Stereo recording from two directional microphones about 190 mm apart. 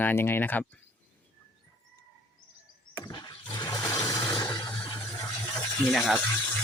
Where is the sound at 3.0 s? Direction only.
20° left (ahead or behind).